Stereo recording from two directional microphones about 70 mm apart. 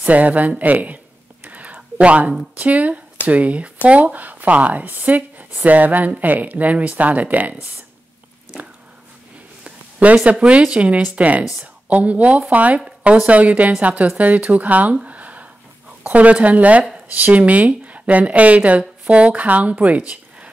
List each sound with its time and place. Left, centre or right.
0.0 s whispering: right
2.5 s speech: right
10.1 s speech: centre
15.0 s a sound: right
16.0 s speech: centre